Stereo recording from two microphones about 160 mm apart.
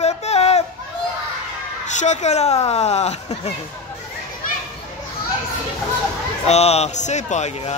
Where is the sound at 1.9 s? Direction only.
45° left (ahead or behind).